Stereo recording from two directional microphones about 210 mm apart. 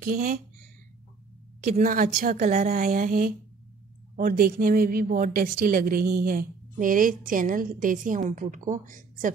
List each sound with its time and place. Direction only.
0.0 s speech: 45° right (ahead or behind)
1.6 s a woman's voice: 40° right (ahead or behind)